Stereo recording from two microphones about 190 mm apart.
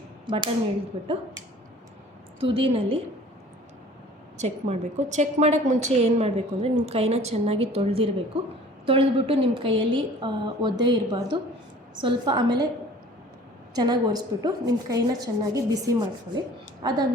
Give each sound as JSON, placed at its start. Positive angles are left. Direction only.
{"t": 0.3, "sound": "a woman's voice", "side_deg": -25}
{"t": 2.4, "sound": "a woman's voice", "side_deg": -30}
{"t": 4.4, "sound": "a woman's voice", "side_deg": -35}
{"t": 13.7, "sound": "a woman's voice", "side_deg": -20}